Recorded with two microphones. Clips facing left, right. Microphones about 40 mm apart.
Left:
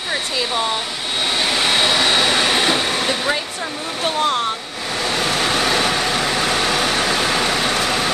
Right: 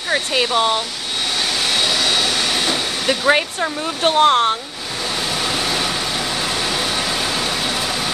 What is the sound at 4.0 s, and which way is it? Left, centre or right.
Speech, right.